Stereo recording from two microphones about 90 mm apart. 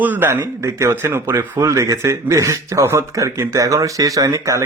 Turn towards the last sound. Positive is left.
turn(degrees=-35)  # may be behind; listen again after turning